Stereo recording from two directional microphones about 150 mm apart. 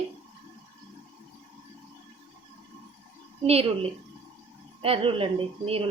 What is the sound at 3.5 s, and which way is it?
A woman's voice, 40° right (ahead or behind).